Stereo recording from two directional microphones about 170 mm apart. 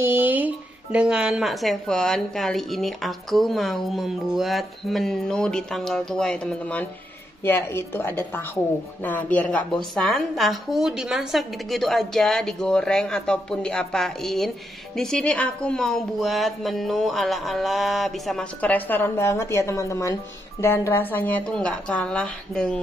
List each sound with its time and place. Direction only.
0.0 s music: 10° right (ahead or behind)
0.9 s a woman's voice: 5° right (ahead or behind)